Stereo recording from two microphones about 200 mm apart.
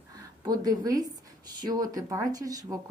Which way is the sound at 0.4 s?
20° right (ahead or behind).